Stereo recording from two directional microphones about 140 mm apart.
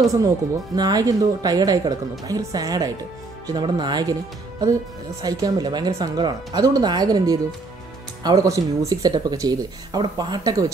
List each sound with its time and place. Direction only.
0.7 s speech: 25° right (ahead or behind)